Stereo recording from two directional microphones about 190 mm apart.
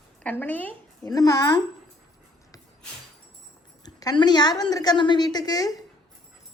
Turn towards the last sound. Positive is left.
turn(degrees=20)  # may be behind; listen again after turning